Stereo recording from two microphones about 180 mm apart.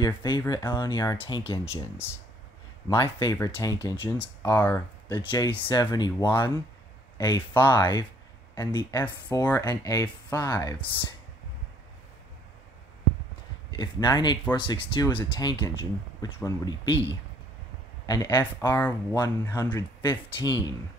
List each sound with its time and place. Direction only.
0.0 s speech: 25° left (ahead or behind)
2.9 s speech: 25° left (ahead or behind)
5.1 s speech: 25° left (ahead or behind)
13.7 s speech: 25° left (ahead or behind)
18.0 s speech: 20° left (ahead or behind)